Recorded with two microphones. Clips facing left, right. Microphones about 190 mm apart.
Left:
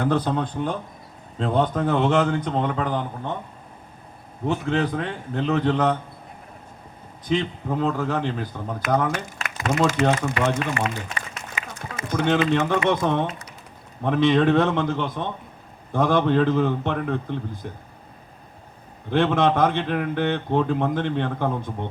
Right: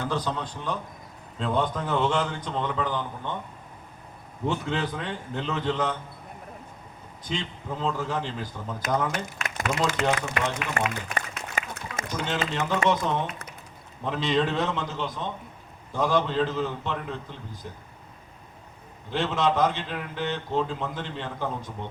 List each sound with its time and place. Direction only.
0.0 s a man's voice: 55° left (ahead or behind)
4.4 s a man's voice: 50° left (ahead or behind)
7.3 s a man's voice: 55° left (ahead or behind)
9.7 s a man's voice: 45° left (ahead or behind)
10.8 s speech: 45° right (ahead or behind)
11.1 s a sound: 55° right (ahead or behind)
12.0 s a man's voice: 55° left (ahead or behind)
19.1 s a man's voice: 55° left (ahead or behind)